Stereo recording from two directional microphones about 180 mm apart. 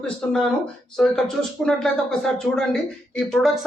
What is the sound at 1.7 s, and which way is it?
A woman's voice, 5° left (ahead or behind).